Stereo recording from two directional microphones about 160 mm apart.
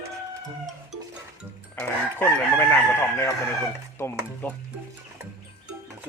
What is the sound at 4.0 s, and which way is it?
Chicken, 10° left (ahead or behind).